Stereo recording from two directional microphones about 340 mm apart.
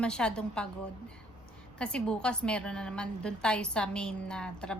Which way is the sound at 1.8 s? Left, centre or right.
Centre.